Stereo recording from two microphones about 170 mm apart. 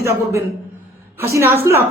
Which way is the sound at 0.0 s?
15° right (ahead or behind).